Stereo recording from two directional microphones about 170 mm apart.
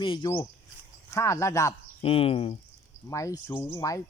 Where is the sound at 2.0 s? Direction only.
35° left (ahead or behind).